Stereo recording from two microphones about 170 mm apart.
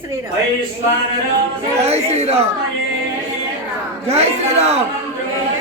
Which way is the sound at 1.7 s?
40° right (ahead or behind).